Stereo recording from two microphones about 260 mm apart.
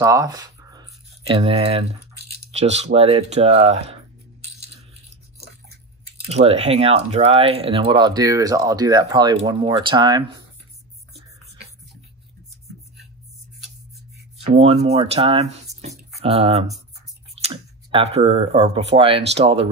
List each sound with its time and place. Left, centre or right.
0.0 s a sound: centre
2.5 s speech: right
6.2 s speech: right
14.4 s speech: right